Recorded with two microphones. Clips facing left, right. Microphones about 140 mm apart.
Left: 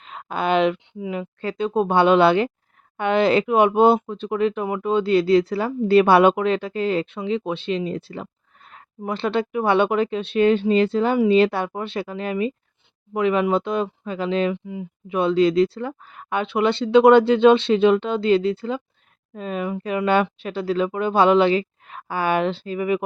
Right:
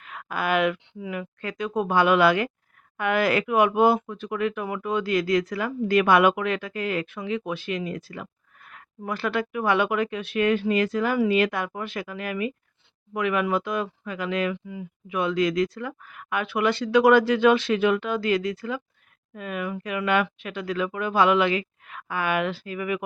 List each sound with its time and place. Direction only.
0.0 s speech: 25° left (ahead or behind)